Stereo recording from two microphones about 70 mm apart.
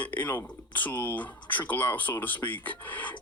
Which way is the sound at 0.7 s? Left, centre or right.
Left.